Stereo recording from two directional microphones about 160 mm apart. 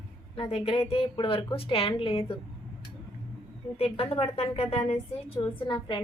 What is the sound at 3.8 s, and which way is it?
A woman's voice, 35° left (ahead or behind).